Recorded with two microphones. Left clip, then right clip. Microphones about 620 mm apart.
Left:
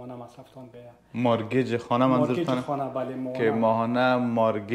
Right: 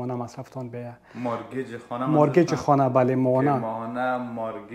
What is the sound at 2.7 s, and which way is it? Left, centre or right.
Speech, right.